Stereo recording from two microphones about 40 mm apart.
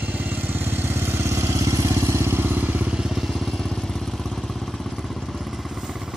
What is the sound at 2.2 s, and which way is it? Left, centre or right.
Vehicle, right.